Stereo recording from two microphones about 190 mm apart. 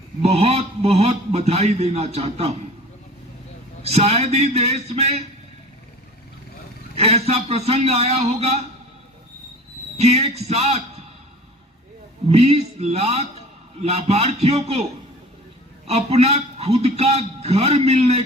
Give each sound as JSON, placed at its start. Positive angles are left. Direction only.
{"t": 0.2, "sound": "a man's voice", "side_deg": -30}
{"t": 3.8, "sound": "a man's voice", "side_deg": -35}
{"t": 6.9, "sound": "a man's voice", "side_deg": -35}
{"t": 10.0, "sound": "a man's voice", "side_deg": -35}
{"t": 12.3, "sound": "a man's voice", "side_deg": -35}
{"t": 15.9, "sound": "a man's voice", "side_deg": -35}